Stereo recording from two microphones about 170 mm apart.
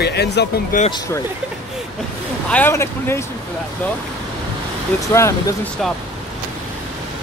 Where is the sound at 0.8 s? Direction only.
25° left (ahead or behind).